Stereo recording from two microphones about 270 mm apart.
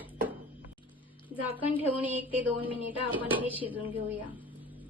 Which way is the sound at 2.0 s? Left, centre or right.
Centre.